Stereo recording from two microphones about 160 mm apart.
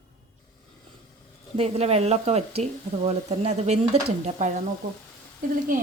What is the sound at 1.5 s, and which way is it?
Speech, 40° right (ahead or behind).